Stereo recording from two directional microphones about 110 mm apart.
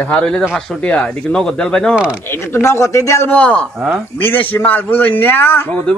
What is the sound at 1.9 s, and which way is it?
Speech, 10° right (ahead or behind).